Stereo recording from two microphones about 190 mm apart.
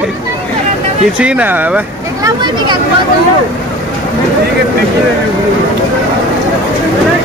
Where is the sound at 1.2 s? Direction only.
5° right (ahead or behind).